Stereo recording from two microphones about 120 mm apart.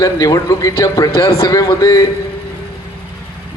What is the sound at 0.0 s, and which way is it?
A man's voice, 30° left (ahead or behind).